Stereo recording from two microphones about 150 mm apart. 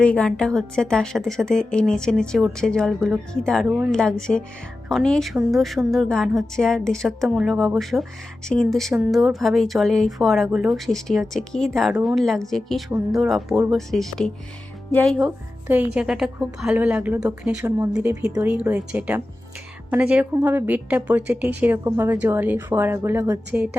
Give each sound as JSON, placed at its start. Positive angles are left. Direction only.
{"t": 0.0, "sound": "a woman's voice", "side_deg": 5}
{"t": 15.6, "sound": "a woman's voice", "side_deg": -10}
{"t": 17.6, "sound": "speech", "side_deg": -20}
{"t": 18.4, "sound": "a woman's voice", "side_deg": -10}